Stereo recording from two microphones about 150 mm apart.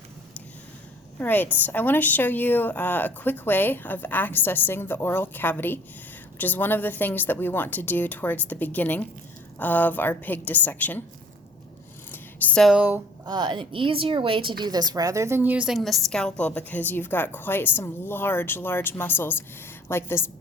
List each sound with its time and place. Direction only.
1.2 s a woman's voice: 10° left (ahead or behind)
12.1 s a sound: 5° left (ahead or behind)
12.7 s speech: 10° right (ahead or behind)
13.2 s a woman's voice: 30° right (ahead or behind); by 20.3 s 15° left (ahead or behind)